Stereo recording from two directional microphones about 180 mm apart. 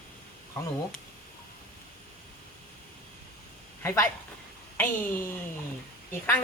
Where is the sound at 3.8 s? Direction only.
15° left (ahead or behind).